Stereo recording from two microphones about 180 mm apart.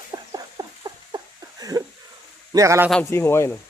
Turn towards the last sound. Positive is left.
turn(degrees=15)  # may be behind; listen again after turning